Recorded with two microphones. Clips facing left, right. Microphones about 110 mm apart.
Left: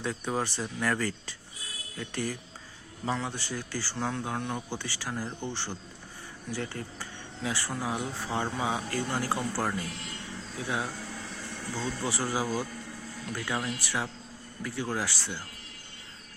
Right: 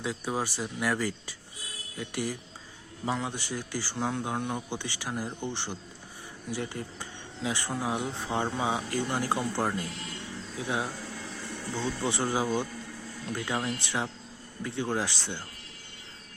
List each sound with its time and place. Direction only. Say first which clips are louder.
0.0 s speech: even; 10° right (ahead or behind)
11.8 s speech: right 2 dB; 25° right (ahead or behind)